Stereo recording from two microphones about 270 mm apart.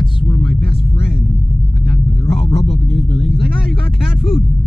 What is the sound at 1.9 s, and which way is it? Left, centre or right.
Vehicle, left.